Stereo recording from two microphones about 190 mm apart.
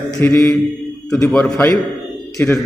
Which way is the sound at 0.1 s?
15° left (ahead or behind).